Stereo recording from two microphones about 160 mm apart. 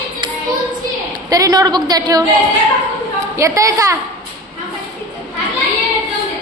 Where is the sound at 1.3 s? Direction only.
20° right (ahead or behind).